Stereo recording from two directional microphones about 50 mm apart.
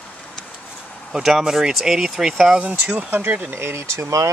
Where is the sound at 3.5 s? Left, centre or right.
Right.